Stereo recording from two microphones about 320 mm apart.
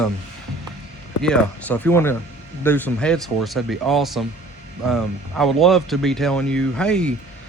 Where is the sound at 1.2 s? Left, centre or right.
Centre.